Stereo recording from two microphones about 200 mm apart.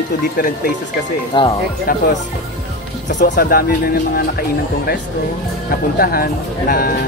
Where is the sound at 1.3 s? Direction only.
25° left (ahead or behind).